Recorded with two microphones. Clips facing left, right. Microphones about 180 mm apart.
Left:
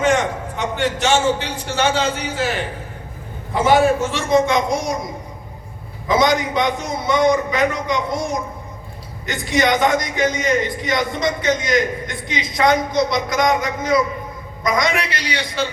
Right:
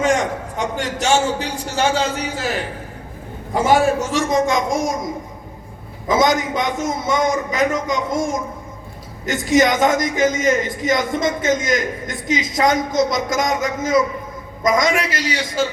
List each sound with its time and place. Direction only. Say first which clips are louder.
0.0 s a man's voice: even; 40° right (ahead or behind)
3.5 s a man's voice: left 1 dB; 40° right (ahead or behind)
6.1 s a man's voice: even; 45° right (ahead or behind)